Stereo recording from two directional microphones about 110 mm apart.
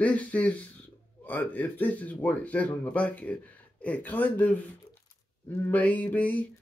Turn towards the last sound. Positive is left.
turn(degrees=15)  # may be behind; listen again after turning